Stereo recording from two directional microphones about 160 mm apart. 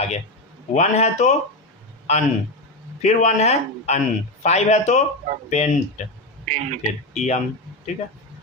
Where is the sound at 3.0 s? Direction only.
45° left (ahead or behind).